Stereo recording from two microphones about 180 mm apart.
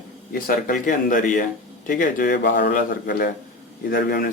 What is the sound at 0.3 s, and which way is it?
A man's voice, 50° left (ahead or behind).